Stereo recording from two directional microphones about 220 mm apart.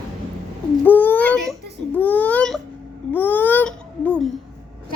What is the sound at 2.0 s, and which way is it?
Baby cry, 5° left (ahead or behind).